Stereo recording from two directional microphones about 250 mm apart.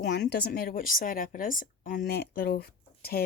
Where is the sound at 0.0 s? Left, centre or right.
Left.